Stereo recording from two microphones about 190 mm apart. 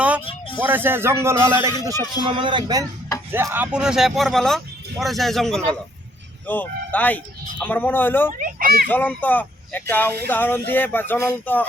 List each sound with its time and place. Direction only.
0.6 s speech: 10° right (ahead or behind)
3.3 s speech: 10° right (ahead or behind); by 8.3 s 10° left (ahead or behind)
8.3 s a child's voice: 45° right (ahead or behind)
8.9 s speech: 10° left (ahead or behind)